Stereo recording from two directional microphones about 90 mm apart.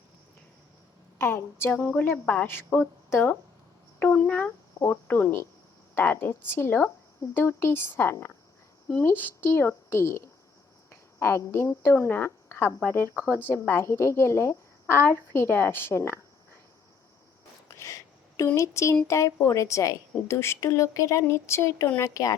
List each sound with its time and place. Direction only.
1.2 s a woman's voice: 25° left (ahead or behind)
1.7 s a woman's voice: 10° left (ahead or behind)
4.0 s a woman's voice: 15° left (ahead or behind); by 16.2 s 30° left (ahead or behind)
17.7 s a sound: 35° left (ahead or behind)
18.4 s a woman's voice: 30° left (ahead or behind)